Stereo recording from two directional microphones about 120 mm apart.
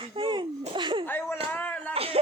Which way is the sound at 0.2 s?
45° right (ahead or behind).